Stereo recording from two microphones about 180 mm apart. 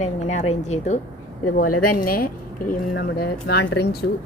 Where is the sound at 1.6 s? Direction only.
50° left (ahead or behind).